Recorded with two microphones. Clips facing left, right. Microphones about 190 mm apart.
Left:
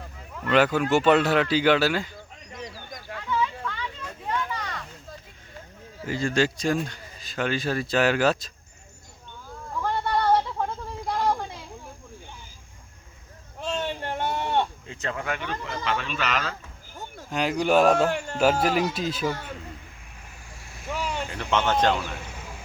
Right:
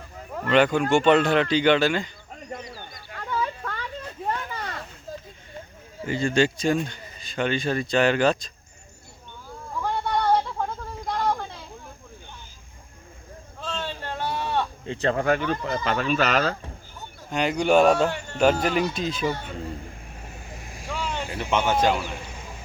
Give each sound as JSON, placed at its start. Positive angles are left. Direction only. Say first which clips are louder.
{"t": 0.5, "sound": "speech", "louder": "right 1 dB", "side_deg": 5}
{"t": 2.3, "sound": "a sound", "louder": "right 3 dB", "side_deg": -50}
{"t": 6.1, "sound": "speech", "louder": "right 2 dB", "side_deg": 0}
{"t": 9.7, "sound": "a sound", "louder": "even", "side_deg": 0}
{"t": 13.6, "sound": "a sound", "louder": "left 3 dB", "side_deg": 15}
{"t": 14.8, "sound": "speech", "louder": "right 8 dB", "side_deg": -35}
{"t": 17.2, "sound": "speech", "louder": "right 2 dB", "side_deg": 5}
{"t": 19.5, "sound": "speech", "louder": "right 8 dB", "side_deg": -45}
{"t": 20.6, "sound": "vehicle", "louder": "right 5 dB", "side_deg": -20}
{"t": 20.9, "sound": "vehicle", "louder": "even", "side_deg": 10}
{"t": 21.2, "sound": "a man's voice", "louder": "right 2 dB", "side_deg": -10}